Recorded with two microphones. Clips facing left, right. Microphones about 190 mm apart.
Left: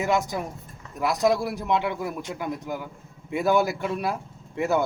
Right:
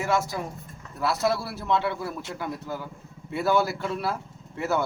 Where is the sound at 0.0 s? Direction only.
15° left (ahead or behind).